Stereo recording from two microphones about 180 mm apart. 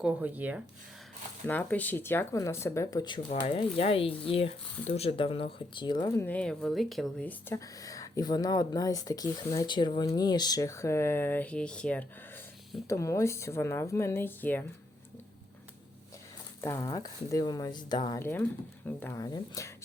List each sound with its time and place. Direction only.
0.0 s speech: 10° right (ahead or behind)
1.5 s speech: 10° left (ahead or behind)
6.2 s speech: 5° left (ahead or behind)
16.6 s speech: 15° left (ahead or behind)
18.2 s speech: 15° left (ahead or behind)